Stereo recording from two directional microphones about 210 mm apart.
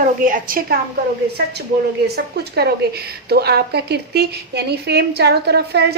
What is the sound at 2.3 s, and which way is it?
A woman's voice, 50° right (ahead or behind).